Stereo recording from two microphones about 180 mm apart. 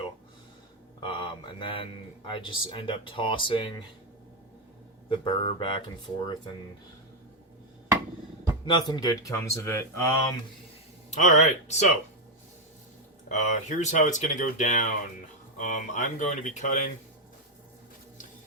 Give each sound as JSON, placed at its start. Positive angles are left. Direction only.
{"t": 1.1, "sound": "speech", "side_deg": 25}
{"t": 5.0, "sound": "speech", "side_deg": 30}
{"t": 8.6, "sound": "speech", "side_deg": 25}
{"t": 11.1, "sound": "speech", "side_deg": 40}
{"t": 13.2, "sound": "speech", "side_deg": 40}